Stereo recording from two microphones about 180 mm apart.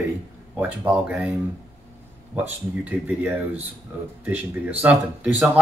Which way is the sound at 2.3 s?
10° right (ahead or behind).